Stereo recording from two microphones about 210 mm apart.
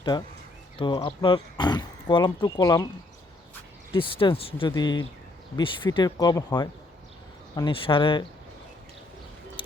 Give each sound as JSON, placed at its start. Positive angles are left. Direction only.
{"t": 0.0, "sound": "speech", "side_deg": 20}
{"t": 3.9, "sound": "speech", "side_deg": 25}
{"t": 9.6, "sound": "music", "side_deg": 25}